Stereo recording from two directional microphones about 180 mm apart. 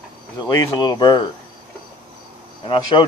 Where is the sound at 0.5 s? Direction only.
25° left (ahead or behind).